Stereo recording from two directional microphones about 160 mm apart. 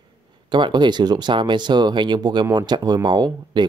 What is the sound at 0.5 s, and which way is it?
Speech, 30° right (ahead or behind).